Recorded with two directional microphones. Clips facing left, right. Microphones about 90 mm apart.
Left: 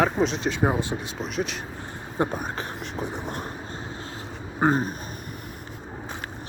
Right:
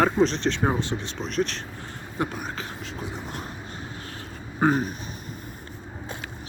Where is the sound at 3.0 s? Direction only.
55° left (ahead or behind).